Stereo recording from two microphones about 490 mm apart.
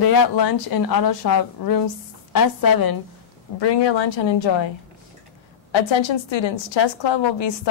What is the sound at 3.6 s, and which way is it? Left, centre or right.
A woman's voice, left.